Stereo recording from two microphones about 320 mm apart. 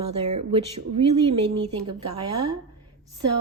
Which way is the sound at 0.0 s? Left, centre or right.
Centre.